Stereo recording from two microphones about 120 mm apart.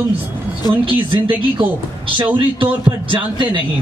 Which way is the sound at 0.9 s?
45° right (ahead or behind).